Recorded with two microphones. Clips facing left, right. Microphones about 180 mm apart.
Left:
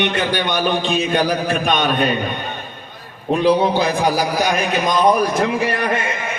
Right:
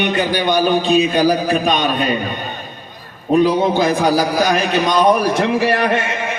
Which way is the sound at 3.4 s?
45° right (ahead or behind).